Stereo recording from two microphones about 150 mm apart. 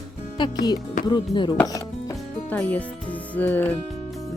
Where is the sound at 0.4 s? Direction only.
30° left (ahead or behind).